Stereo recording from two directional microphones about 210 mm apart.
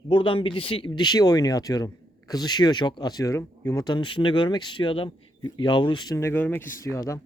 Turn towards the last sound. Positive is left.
turn(degrees=15)  # may be behind; listen again after turning